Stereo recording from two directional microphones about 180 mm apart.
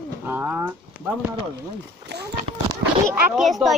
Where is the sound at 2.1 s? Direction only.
65° right (ahead or behind).